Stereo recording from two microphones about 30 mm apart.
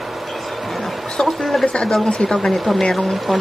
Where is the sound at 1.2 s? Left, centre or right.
Centre.